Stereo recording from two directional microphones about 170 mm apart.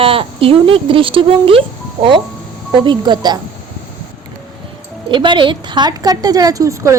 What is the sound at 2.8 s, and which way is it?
Speech, 25° right (ahead or behind).